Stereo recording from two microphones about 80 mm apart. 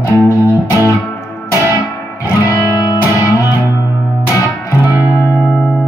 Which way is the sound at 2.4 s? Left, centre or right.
Left.